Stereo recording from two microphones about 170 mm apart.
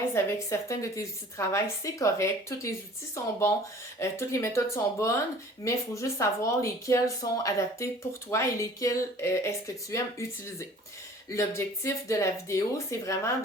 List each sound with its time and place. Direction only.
0.1 s a woman's voice: 15° left (ahead or behind)